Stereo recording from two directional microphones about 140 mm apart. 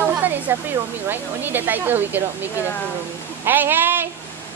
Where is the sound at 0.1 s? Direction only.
15° right (ahead or behind).